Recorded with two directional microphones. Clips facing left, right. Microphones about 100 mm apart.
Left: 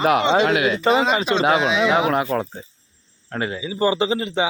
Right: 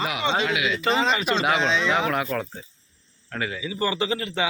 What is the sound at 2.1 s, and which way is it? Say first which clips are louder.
Speech: left 5 dB; 25° left (ahead or behind).